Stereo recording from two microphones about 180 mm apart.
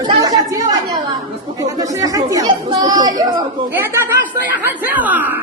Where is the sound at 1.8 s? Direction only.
20° right (ahead or behind).